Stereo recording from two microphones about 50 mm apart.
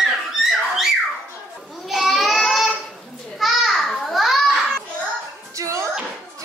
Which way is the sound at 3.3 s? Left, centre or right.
Centre.